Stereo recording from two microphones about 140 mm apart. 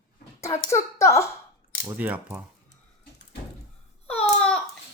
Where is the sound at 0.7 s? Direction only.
20° left (ahead or behind).